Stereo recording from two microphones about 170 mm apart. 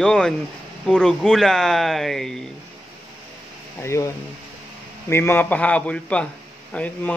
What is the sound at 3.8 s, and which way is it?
A man's voice, 15° left (ahead or behind).